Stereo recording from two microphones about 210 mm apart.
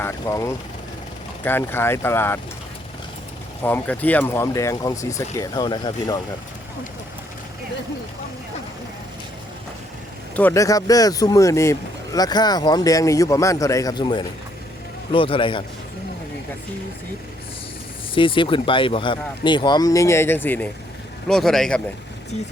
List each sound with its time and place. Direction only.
0.0 s speech: 15° left (ahead or behind)
3.6 s speech: 10° left (ahead or behind)
10.3 s speech: 10° left (ahead or behind)
18.1 s speech: 25° left (ahead or behind); by 21.8 s centre (ahead or behind)